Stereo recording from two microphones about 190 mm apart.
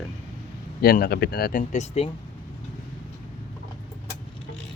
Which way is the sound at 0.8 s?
50° left (ahead or behind).